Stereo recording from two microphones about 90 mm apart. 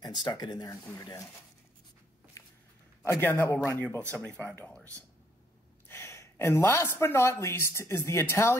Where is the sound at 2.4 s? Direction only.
35° left (ahead or behind).